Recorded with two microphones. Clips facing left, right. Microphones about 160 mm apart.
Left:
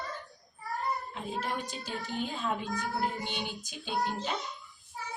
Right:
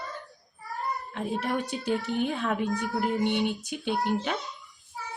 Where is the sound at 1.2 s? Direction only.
65° right (ahead or behind).